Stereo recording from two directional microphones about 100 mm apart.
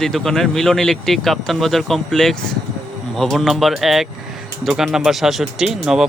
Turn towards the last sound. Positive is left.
turn(degrees=-5)  # may be behind; listen again after turning